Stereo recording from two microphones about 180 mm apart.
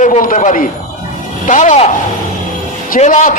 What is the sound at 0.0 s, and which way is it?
A man's voice, 45° left (ahead or behind).